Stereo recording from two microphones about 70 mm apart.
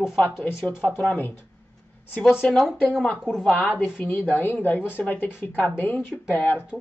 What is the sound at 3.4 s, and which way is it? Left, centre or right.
Speech, left.